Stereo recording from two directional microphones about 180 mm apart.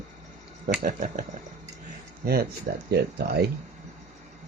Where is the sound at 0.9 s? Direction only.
45° right (ahead or behind).